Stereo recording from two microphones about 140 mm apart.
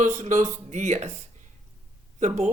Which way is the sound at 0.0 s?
60° right (ahead or behind).